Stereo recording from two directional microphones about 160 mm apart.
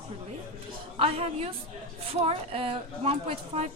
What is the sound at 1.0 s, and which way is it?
A woman's voice, 40° right (ahead or behind).